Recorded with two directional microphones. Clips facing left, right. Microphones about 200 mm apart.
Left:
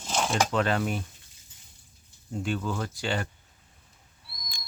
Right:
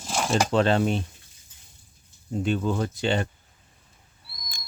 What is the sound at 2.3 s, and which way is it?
Speech, 20° right (ahead or behind).